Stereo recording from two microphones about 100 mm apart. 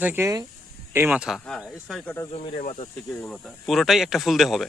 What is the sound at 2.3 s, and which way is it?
Speech, 65° left (ahead or behind).